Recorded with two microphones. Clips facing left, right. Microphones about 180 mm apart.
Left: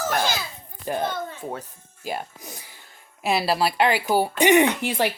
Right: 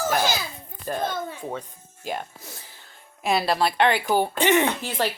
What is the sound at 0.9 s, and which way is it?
Speech, 15° left (ahead or behind).